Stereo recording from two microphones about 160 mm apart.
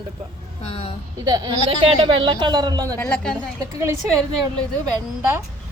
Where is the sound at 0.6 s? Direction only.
40° left (ahead or behind).